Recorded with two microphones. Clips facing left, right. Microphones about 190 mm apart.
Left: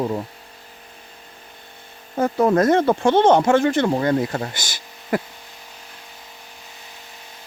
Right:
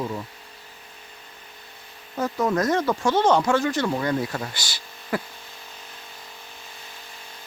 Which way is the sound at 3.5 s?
55° left (ahead or behind).